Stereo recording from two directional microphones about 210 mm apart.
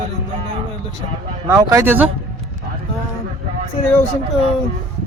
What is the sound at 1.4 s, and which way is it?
Speech, 15° right (ahead or behind).